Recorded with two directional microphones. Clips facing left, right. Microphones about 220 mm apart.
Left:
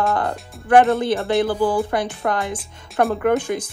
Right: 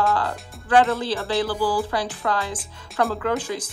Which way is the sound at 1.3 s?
25° left (ahead or behind).